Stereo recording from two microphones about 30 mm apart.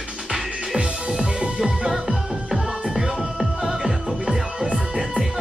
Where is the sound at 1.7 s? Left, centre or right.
Right.